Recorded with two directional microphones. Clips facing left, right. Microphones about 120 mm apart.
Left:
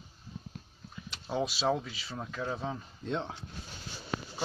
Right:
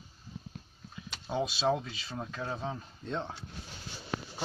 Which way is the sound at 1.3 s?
Centre (ahead or behind).